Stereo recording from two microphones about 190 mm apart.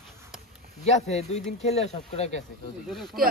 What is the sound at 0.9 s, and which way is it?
Speech, 35° left (ahead or behind).